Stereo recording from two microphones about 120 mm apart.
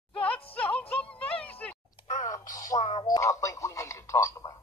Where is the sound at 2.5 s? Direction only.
30° left (ahead or behind).